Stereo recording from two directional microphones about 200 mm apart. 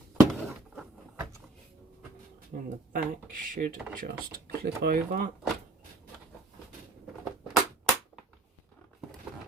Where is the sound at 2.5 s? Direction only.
40° right (ahead or behind).